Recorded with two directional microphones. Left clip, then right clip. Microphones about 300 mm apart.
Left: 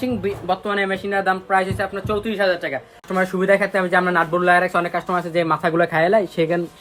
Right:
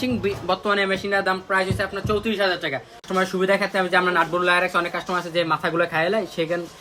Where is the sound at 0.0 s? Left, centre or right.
Centre.